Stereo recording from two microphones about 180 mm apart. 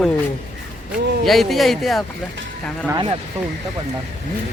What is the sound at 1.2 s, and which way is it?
Speech, centre (ahead or behind).